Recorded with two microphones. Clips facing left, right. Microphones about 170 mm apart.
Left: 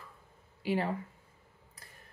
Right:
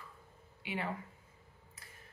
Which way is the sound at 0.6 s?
35° left (ahead or behind).